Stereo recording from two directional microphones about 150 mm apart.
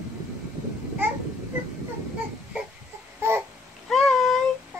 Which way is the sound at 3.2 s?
15° right (ahead or behind).